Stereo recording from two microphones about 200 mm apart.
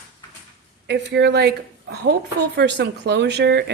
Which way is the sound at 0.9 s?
60° right (ahead or behind).